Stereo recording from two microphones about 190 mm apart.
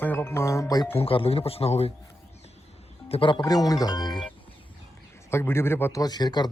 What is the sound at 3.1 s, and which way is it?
Speech, 25° left (ahead or behind).